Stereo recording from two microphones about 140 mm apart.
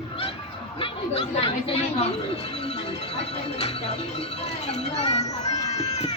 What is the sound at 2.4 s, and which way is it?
Music, 45° left (ahead or behind).